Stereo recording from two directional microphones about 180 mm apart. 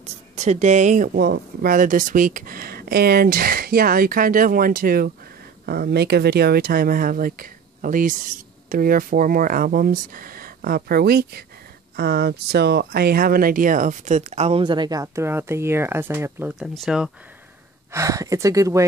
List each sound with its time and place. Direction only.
0.0 s speech: 40° right (ahead or behind); by 17.1 s centre (ahead or behind)
17.9 s speech: 15° right (ahead or behind)